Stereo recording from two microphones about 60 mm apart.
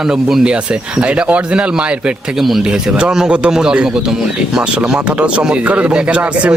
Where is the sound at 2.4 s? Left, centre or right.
Centre.